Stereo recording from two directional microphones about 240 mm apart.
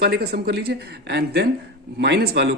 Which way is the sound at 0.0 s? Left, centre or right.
Right.